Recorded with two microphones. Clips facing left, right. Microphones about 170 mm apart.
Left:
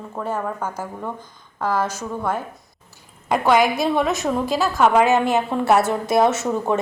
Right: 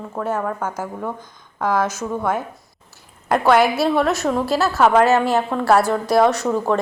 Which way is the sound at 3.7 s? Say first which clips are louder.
Right 2 dB; 15° left (ahead or behind).